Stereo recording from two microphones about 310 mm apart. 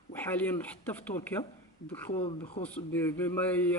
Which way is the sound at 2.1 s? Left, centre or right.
Centre.